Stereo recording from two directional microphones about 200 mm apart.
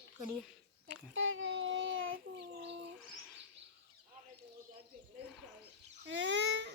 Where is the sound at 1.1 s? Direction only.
80° right.